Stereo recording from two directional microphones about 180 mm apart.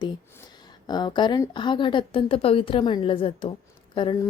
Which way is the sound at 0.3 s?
25° left (ahead or behind).